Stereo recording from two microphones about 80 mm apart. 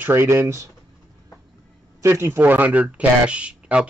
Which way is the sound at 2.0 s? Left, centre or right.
Right.